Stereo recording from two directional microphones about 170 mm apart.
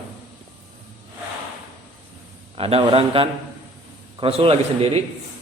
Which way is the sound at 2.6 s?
35° right (ahead or behind).